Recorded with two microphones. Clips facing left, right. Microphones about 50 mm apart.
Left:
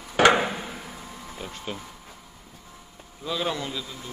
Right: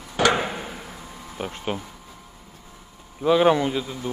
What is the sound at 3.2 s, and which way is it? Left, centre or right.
Speech, right.